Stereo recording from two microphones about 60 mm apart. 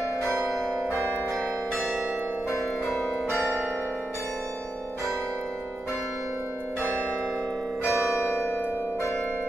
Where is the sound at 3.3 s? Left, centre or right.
Centre.